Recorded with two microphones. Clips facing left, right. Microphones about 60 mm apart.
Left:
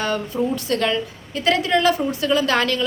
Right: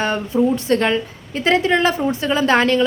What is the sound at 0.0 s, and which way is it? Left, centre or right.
A woman's voice, right.